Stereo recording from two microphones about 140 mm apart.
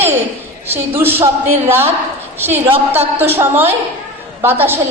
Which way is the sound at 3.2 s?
15° right (ahead or behind).